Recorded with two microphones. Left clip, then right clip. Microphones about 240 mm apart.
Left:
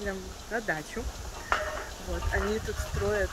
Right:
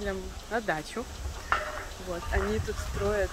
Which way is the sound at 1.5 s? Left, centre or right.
Left.